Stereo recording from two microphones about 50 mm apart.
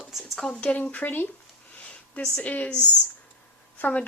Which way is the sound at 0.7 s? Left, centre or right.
Left.